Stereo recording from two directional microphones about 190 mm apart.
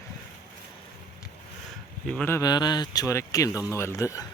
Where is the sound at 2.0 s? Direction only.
10° left (ahead or behind).